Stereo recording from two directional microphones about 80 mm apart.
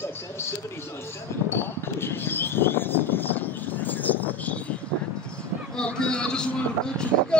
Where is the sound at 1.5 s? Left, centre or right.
Left.